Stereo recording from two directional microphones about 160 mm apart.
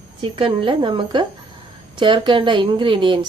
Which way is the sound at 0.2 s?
35° right (ahead or behind).